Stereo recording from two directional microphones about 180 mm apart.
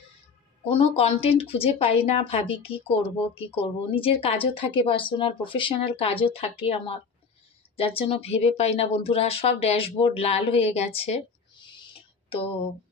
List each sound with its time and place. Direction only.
0.7 s speech: 35° left (ahead or behind)